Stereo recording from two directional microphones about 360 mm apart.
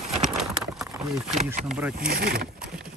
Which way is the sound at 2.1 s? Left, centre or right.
Right.